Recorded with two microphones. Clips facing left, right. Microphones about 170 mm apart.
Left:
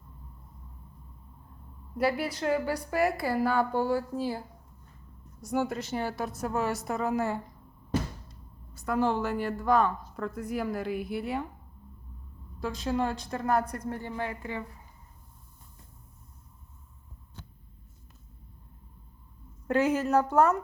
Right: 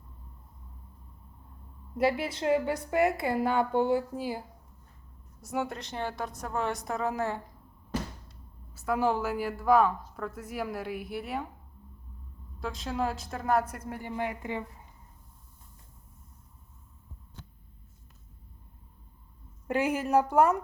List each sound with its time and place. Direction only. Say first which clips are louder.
2.0 s a woman's voice: even; 25° right (ahead or behind)
5.4 s a woman's voice: left 3 dB; centre (ahead or behind)
8.7 s a woman's voice: even; 5° right (ahead or behind)
12.5 s a woman's voice: left 3 dB; centre (ahead or behind); by 14.6 s 15° right (ahead or behind)
19.6 s speech: left 3 dB; 10° right (ahead or behind)